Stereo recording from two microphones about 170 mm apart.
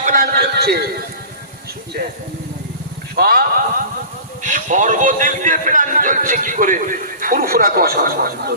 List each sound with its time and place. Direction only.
0.0 s a sound: 55° right (ahead or behind)
3.2 s speech: 60° right (ahead or behind)
4.4 s a man's voice: 50° right (ahead or behind)